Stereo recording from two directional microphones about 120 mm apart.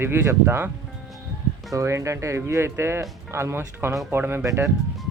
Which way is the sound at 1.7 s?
25° right (ahead or behind).